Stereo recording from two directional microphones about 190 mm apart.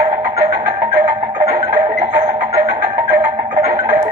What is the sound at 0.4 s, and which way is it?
Music, 20° right (ahead or behind).